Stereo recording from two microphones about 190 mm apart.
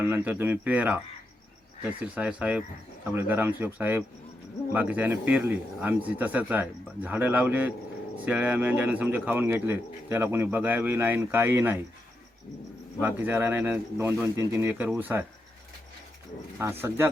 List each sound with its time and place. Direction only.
0.0 s a man's voice: 10° right (ahead or behind)
13.0 s a man's voice: 10° right (ahead or behind)
16.6 s a man's voice: 10° right (ahead or behind)